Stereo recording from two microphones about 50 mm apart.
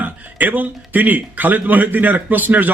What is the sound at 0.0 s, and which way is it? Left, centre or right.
A man's voice, right.